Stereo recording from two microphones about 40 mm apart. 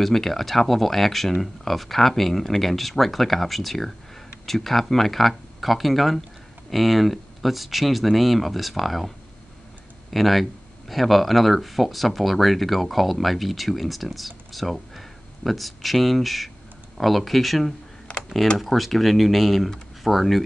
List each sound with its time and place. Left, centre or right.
0.0 s speech: centre
10.1 s speech: centre
18.1 s computer keyboard: left
18.6 s speech: centre